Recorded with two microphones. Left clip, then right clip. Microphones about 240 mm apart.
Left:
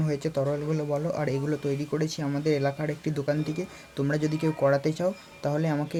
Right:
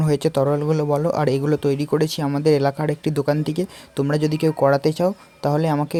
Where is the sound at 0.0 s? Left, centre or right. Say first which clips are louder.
Right 9 dB; right.